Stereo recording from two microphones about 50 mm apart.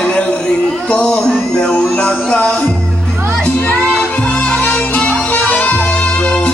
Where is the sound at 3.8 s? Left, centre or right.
Left.